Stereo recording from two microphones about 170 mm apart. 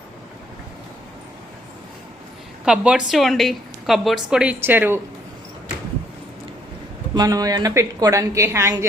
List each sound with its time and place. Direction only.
2.6 s a woman's voice: 5° right (ahead or behind)
7.1 s a woman's voice: 20° right (ahead or behind)